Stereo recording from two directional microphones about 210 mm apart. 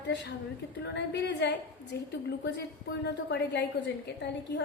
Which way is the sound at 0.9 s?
55° left (ahead or behind).